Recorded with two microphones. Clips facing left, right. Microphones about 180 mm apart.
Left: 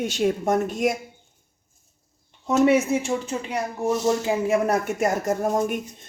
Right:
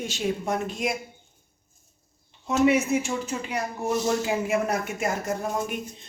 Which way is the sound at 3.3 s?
25° left (ahead or behind).